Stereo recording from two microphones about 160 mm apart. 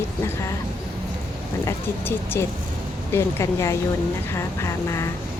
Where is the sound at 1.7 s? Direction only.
15° left (ahead or behind).